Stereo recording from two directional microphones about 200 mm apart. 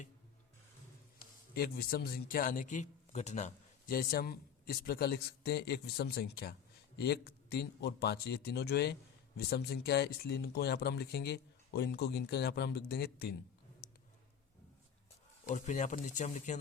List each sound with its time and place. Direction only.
1.5 s speech: 50° left (ahead or behind)
15.4 s speech: 40° left (ahead or behind)